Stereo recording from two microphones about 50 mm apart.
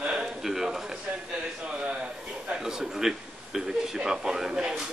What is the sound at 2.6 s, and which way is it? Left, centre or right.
A man's voice, centre.